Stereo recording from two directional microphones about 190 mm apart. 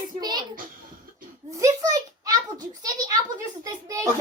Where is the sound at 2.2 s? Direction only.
20° right (ahead or behind).